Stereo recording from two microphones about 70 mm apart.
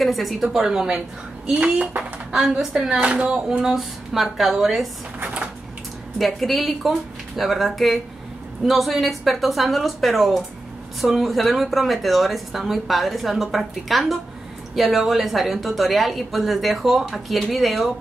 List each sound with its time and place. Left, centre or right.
0.0 s speech: centre
5.2 s a sound: centre
6.1 s speech: centre